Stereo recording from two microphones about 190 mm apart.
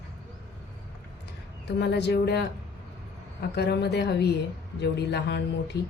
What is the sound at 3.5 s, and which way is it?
A woman's voice, 60° left (ahead or behind).